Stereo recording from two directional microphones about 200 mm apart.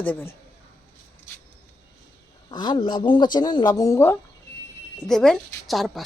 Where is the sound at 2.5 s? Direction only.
25° left (ahead or behind).